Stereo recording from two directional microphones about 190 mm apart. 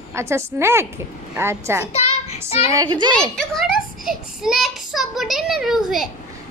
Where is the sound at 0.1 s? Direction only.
15° right (ahead or behind).